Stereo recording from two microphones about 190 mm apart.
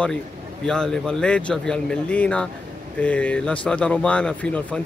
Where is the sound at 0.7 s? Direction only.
5° left (ahead or behind).